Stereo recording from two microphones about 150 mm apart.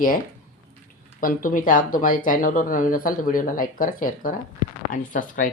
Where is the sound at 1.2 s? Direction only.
65° left (ahead or behind).